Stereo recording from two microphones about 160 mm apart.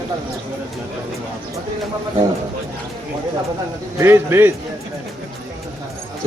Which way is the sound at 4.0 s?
15° right (ahead or behind).